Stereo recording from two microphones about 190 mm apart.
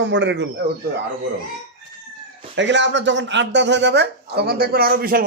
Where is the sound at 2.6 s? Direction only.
70° right (ahead or behind).